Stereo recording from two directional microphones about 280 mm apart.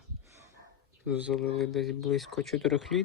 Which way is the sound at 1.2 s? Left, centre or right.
Centre.